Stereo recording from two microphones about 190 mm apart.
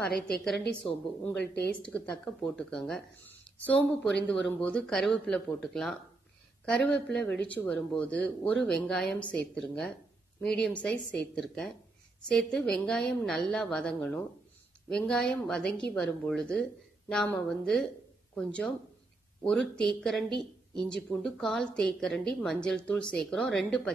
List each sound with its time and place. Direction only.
1.4 s speech: 60° left (ahead or behind)
1.8 s speech: 5° left (ahead or behind)